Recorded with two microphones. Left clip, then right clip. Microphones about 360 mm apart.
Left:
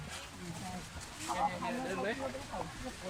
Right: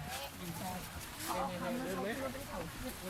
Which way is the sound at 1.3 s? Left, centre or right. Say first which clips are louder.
Left 3 dB; centre.